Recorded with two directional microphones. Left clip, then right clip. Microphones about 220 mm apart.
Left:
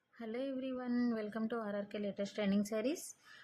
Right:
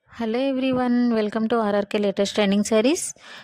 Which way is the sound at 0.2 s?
45° right (ahead or behind).